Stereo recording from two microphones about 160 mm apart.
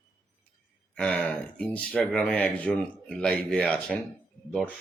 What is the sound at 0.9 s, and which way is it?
Speech, 5° left (ahead or behind).